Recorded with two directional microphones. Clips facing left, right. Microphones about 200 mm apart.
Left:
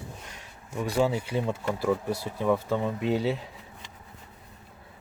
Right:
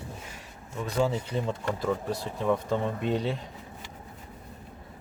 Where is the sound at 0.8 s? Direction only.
10° left (ahead or behind).